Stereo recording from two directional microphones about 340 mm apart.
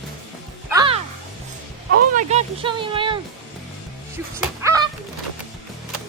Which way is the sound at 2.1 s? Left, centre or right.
Centre.